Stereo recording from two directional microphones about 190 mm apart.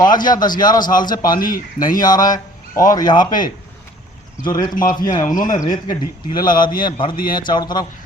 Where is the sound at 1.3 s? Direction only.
45° left (ahead or behind).